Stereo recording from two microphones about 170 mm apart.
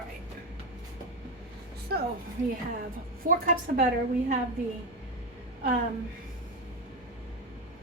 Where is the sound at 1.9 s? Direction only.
70° right (ahead or behind).